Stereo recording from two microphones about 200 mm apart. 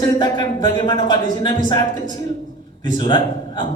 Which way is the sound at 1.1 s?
20° left (ahead or behind).